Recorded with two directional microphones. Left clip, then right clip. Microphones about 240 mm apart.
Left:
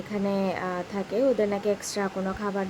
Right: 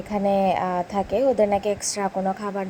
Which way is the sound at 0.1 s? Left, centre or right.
Centre.